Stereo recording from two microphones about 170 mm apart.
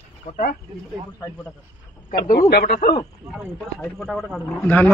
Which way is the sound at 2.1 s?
60° left (ahead or behind).